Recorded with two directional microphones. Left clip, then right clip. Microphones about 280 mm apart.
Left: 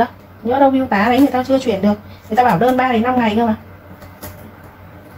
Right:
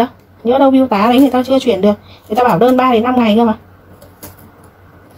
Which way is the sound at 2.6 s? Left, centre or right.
Right.